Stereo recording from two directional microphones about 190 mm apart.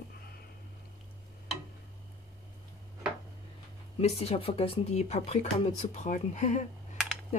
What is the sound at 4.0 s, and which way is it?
Speech, 35° left (ahead or behind).